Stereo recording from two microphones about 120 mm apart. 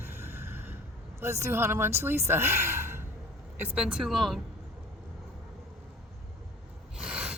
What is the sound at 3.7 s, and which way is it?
Speech, 5° right (ahead or behind).